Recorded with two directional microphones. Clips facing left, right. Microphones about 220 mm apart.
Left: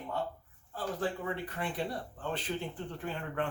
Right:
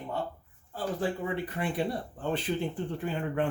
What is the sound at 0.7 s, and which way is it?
A man's voice, 10° right (ahead or behind).